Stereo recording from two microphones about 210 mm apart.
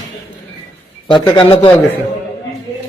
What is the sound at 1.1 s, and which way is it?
Speech, 25° left (ahead or behind).